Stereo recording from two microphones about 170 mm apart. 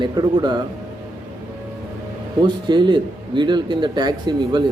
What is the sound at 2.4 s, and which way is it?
Speech, 25° right (ahead or behind).